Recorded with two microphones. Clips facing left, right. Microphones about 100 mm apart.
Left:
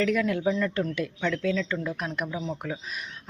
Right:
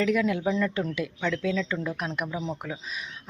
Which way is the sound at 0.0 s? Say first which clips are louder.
Even; 10° right (ahead or behind).